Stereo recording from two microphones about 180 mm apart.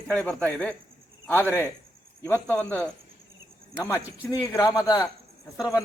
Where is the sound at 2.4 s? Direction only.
10° left (ahead or behind).